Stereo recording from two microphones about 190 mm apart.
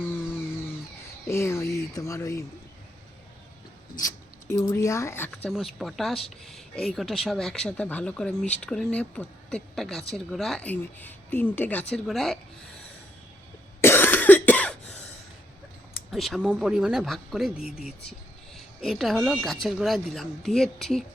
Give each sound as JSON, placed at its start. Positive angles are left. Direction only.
{"t": 0.0, "sound": "a sound", "side_deg": 10}
{"t": 1.3, "sound": "speech", "side_deg": 15}
{"t": 3.9, "sound": "speech", "side_deg": 15}
{"t": 5.5, "sound": "speech", "side_deg": 0}
{"t": 13.8, "sound": "cough", "side_deg": 10}
{"t": 16.1, "sound": "speech", "side_deg": 0}